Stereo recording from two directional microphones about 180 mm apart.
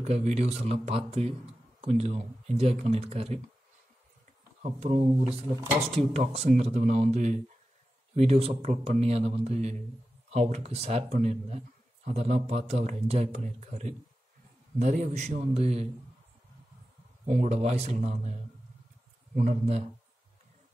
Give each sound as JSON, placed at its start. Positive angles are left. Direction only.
{"t": 0.0, "sound": "speech", "side_deg": -35}
{"t": 4.6, "sound": "speech", "side_deg": -35}
{"t": 5.9, "sound": "speech", "side_deg": -35}
{"t": 17.3, "sound": "speech", "side_deg": -40}